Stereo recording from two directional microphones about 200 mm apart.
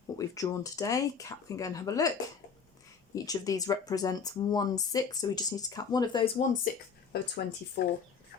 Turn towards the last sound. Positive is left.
turn(degrees=55)  # may be behind; listen again after turning